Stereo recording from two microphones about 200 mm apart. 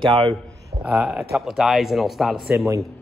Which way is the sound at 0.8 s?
5° right (ahead or behind).